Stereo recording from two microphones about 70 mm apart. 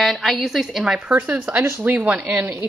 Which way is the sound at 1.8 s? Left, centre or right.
Right.